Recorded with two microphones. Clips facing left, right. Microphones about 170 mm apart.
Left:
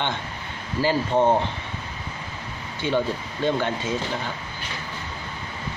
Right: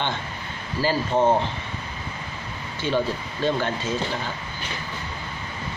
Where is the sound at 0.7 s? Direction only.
15° left (ahead or behind).